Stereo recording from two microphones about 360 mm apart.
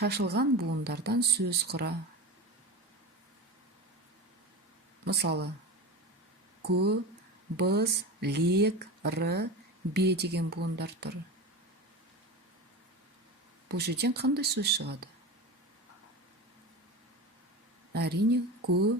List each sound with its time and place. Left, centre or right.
0.0 s speech: right
5.0 s speech: right
6.7 s speech: right
13.7 s speech: right
17.9 s speech: right